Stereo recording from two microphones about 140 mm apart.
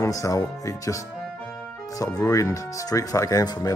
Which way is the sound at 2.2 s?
20° left (ahead or behind).